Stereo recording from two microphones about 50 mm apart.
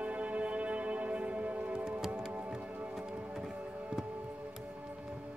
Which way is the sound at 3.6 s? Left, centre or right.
Right.